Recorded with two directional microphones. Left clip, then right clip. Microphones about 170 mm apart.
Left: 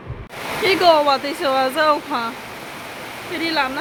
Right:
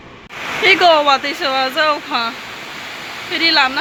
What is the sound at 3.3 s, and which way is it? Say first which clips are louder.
Speech: right 7 dB; 5° left (ahead or behind).